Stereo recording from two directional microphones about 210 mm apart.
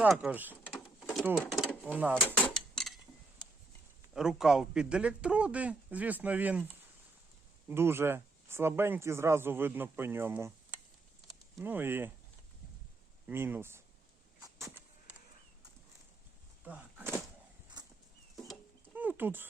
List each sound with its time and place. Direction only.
0.0 s speech: 5° right (ahead or behind)
2.2 s drawer open or close: 5° left (ahead or behind)
4.1 s speech: centre (ahead or behind)
7.7 s speech: 10° right (ahead or behind)
11.5 s speech: 10° right (ahead or behind)
13.2 s speech: 10° right (ahead or behind)
14.4 s a sound: 15° right (ahead or behind)
16.6 s a sound: 10° right (ahead or behind)
17.8 s horse: 20° right (ahead or behind)
18.9 s dog: 10° right (ahead or behind)